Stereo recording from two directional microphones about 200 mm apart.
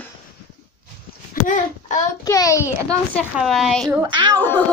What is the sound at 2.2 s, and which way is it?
Speech, 15° left (ahead or behind).